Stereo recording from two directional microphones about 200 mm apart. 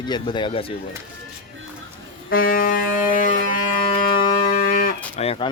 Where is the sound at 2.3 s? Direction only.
45° left (ahead or behind).